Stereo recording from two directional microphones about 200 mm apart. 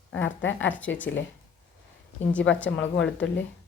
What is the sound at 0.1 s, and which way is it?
Speech, 70° left (ahead or behind).